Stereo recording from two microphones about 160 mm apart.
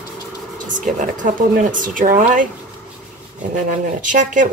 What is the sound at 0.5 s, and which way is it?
Speech, 55° right (ahead or behind).